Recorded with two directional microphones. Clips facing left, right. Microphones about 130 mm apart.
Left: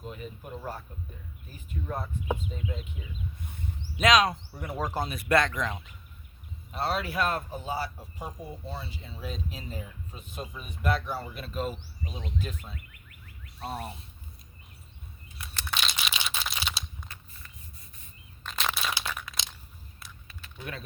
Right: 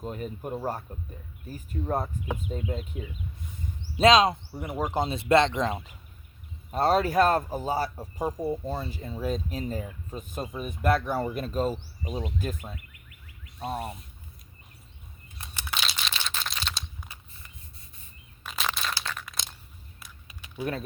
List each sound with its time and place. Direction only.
0.0 s speech: 45° right (ahead or behind)
3.9 s speech: 30° right (ahead or behind); by 12.7 s 45° right (ahead or behind)
15.7 s crumpling: centre (ahead or behind)
18.4 s a sound: centre (ahead or behind)
19.2 s crunch: centre (ahead or behind)
20.0 s a sound: 10° right (ahead or behind)